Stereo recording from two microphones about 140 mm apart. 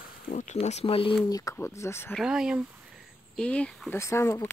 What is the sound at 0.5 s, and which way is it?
Speech, 50° left (ahead or behind).